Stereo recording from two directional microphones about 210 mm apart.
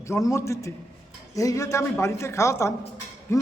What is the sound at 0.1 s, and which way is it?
A man's voice, 15° left (ahead or behind).